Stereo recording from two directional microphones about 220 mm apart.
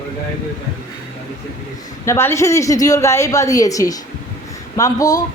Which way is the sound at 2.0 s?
10° left (ahead or behind).